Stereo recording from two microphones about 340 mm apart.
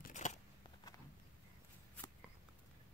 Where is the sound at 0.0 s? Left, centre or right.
Left.